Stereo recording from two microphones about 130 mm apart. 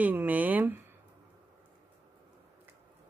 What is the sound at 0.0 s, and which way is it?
Speech, 15° right (ahead or behind).